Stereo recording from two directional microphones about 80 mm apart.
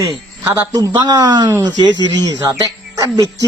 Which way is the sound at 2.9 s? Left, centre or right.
Right.